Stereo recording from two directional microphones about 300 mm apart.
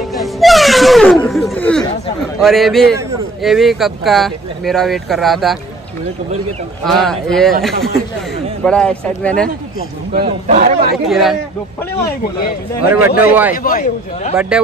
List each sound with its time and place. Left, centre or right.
0.1 s music: centre
2.4 s speech: centre
6.8 s speech: centre
10.2 s a man's voice: right
11.1 s speech: centre
12.8 s speech: centre
13.6 s speech: left
14.3 s speech: centre